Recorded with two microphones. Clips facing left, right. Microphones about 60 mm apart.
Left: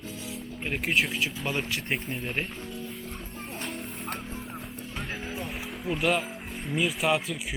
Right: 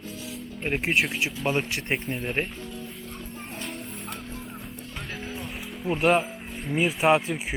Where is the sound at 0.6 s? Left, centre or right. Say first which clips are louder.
Right 4 dB; right.